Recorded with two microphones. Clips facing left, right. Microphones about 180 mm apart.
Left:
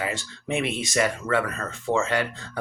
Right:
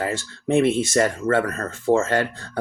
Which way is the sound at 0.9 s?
45° right (ahead or behind).